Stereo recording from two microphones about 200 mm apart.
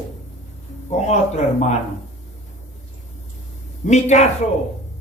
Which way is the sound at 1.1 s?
35° left (ahead or behind).